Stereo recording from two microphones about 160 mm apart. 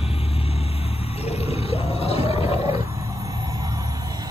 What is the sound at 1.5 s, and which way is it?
Whale vocalization, 40° left (ahead or behind).